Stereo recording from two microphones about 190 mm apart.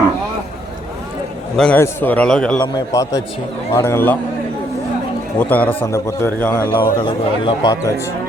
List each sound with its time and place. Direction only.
1.5 s a man's voice: 5° left (ahead or behind)
2.7 s a man's voice: 15° left (ahead or behind)
5.4 s a man's voice: 10° left (ahead or behind)
7.0 s speech: 25° left (ahead or behind)